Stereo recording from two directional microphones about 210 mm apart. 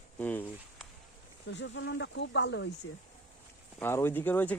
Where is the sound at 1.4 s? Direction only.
60° left (ahead or behind).